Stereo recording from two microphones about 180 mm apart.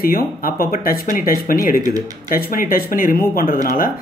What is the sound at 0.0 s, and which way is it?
Speech, 55° left (ahead or behind).